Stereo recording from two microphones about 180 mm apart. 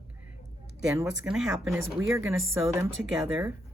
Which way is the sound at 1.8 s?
15° right (ahead or behind).